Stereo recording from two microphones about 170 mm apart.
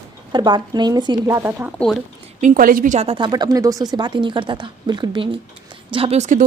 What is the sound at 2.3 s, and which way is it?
A woman's voice, 50° right (ahead or behind).